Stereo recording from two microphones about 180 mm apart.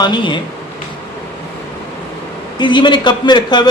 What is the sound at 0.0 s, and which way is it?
Speech, 25° left (ahead or behind).